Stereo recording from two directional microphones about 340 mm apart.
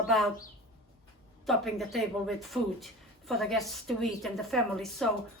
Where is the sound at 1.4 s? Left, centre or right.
Centre.